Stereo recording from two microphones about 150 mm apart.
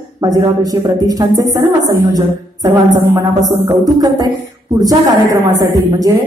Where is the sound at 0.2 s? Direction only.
25° right (ahead or behind).